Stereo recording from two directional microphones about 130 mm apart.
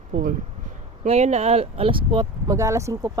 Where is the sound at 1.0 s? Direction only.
60° right (ahead or behind); by 2.5 s 40° right (ahead or behind).